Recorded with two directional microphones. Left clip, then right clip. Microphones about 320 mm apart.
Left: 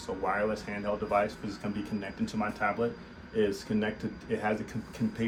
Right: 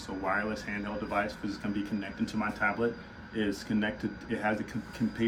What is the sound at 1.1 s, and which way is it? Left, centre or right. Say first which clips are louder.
Speech: left 1 dB; centre.